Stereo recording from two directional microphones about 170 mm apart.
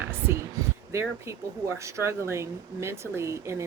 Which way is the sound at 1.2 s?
15° right (ahead or behind).